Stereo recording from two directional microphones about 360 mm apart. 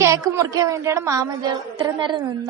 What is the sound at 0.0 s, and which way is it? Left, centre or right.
A woman's voice, centre.